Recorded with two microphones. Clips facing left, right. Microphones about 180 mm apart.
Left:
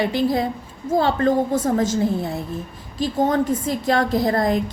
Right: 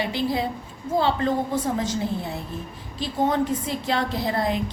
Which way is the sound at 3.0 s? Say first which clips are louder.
Left 3 dB; 45° left (ahead or behind).